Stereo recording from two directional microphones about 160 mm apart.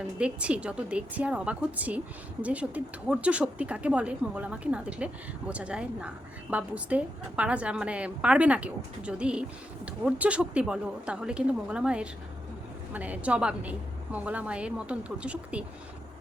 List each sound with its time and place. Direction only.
0.2 s a woman's voice: 5° right (ahead or behind)